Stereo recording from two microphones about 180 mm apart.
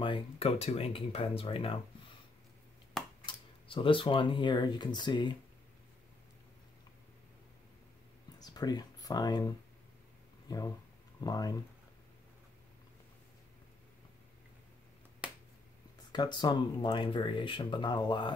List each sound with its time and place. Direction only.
0.0 s speech: 30° left (ahead or behind)
3.3 s speech: 30° left (ahead or behind)
8.4 s speech: 20° left (ahead or behind)
11.1 s speech: 20° left (ahead or behind)
16.1 s speech: 25° left (ahead or behind)